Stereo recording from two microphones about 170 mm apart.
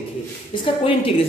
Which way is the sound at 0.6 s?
30° left (ahead or behind).